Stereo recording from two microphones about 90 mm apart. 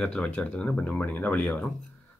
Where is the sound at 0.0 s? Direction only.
10° left (ahead or behind).